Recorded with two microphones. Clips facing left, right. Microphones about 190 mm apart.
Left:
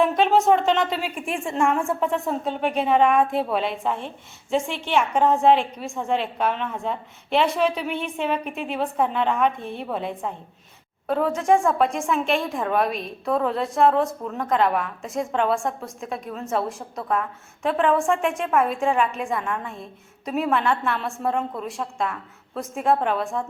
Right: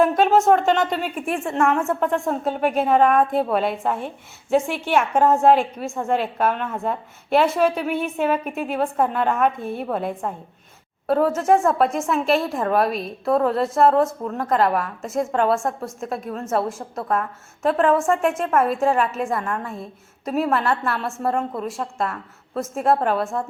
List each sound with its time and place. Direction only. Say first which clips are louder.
0.0 s speech: right 2 dB; centre (ahead or behind)